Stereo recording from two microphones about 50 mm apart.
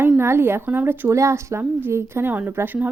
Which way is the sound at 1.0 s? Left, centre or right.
Right.